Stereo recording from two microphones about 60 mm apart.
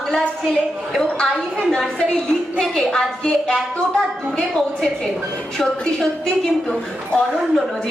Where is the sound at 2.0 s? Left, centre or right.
Centre.